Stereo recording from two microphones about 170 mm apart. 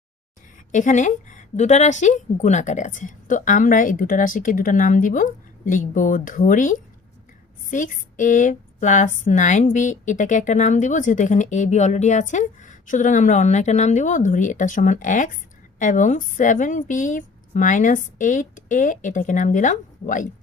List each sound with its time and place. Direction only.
0.7 s a woman's voice: 45° left (ahead or behind)